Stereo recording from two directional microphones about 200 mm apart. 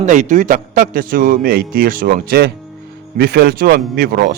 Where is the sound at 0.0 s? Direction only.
40° right (ahead or behind).